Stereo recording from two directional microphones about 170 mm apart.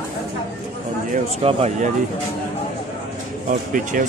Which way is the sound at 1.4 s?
35° right (ahead or behind).